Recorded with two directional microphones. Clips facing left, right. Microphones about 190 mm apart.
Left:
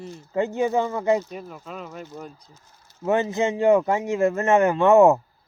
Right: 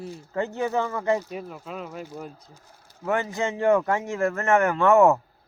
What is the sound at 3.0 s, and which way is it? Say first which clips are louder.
Speech: left 4 dB; 20° left (ahead or behind).